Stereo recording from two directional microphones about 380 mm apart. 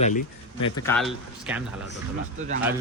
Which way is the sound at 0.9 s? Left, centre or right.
Centre.